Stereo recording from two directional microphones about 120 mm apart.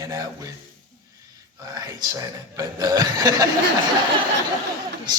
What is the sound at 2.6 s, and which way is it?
Speech, 30° right (ahead or behind).